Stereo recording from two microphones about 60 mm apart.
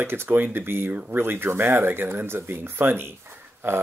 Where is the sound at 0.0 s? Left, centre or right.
Right.